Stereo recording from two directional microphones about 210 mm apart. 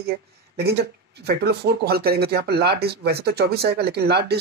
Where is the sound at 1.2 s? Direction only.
50° right (ahead or behind).